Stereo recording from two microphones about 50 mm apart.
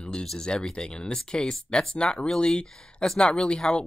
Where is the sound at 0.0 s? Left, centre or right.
Centre.